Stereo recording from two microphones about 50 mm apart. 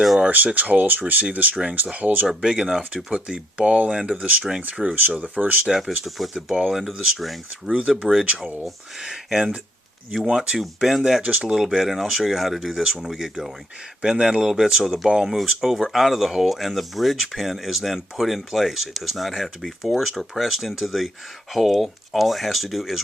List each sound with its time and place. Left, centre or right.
0.3 s speech: right
2.4 s speech: centre; by 5.5 s right
6.1 s speech: centre
6.3 s speech: centre
6.7 s speech: centre
7.7 s speech: right
8.6 s speech: centre
10.8 s speech: centre
11.2 s speech: right
11.4 s speech: centre
15.4 s speech: centre